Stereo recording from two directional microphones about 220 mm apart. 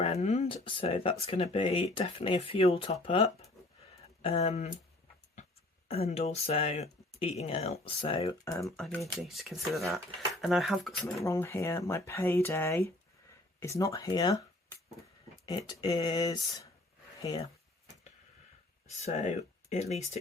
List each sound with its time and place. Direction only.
0.0 s speech: 30° left (ahead or behind)
5.9 s speech: 25° left (ahead or behind)
8.6 s speech: 5° left (ahead or behind)
11.2 s speech: 15° left (ahead or behind)
19.0 s speech: 30° left (ahead or behind)